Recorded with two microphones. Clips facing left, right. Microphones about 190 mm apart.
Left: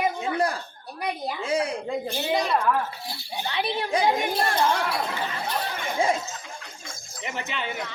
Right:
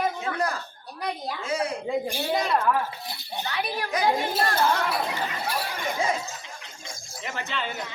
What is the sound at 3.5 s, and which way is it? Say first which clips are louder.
Speech: left 4 dB; 25° left (ahead or behind).